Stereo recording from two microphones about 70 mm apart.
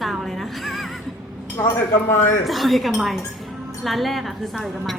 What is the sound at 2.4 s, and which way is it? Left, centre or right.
A woman's voice, centre.